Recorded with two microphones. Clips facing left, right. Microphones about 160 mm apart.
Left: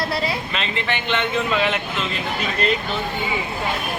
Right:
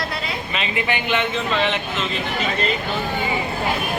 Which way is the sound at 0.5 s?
5° right (ahead or behind).